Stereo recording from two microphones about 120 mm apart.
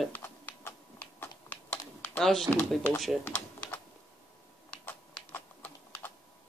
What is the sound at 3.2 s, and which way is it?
Typing, 15° left (ahead or behind).